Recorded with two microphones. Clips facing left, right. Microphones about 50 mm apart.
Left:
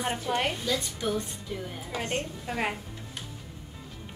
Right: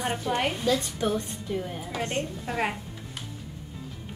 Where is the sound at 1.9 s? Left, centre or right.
Centre.